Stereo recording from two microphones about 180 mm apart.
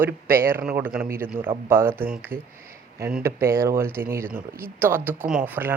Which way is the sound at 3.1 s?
10° right (ahead or behind).